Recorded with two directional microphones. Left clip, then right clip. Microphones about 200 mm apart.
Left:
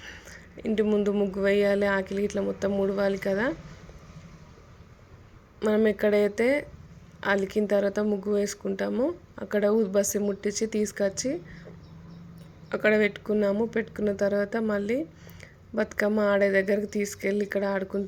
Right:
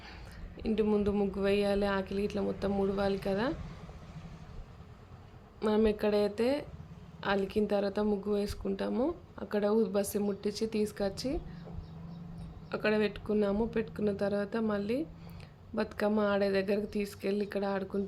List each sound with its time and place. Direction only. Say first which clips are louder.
0.0 s speech: left 7 dB; 15° left (ahead or behind)
5.5 s a woman's voice: left 5 dB; 15° left (ahead or behind)
12.6 s speech: left 7 dB; 20° left (ahead or behind)